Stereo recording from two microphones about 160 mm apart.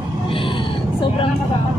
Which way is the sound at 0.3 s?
30° left (ahead or behind).